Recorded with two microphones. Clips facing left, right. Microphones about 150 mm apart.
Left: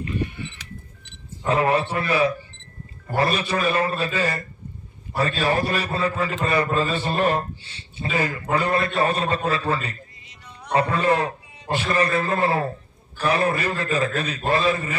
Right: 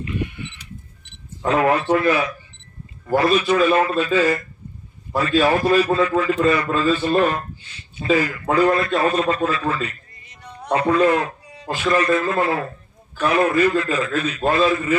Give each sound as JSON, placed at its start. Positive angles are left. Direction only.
{"t": 0.0, "sound": "sheep", "side_deg": 35}
{"t": 1.5, "sound": "a man's voice", "side_deg": 30}
{"t": 10.2, "sound": "music", "side_deg": -45}
{"t": 10.7, "sound": "a man's voice", "side_deg": 35}